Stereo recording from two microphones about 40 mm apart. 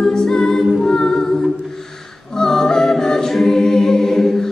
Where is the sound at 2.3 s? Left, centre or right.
Centre.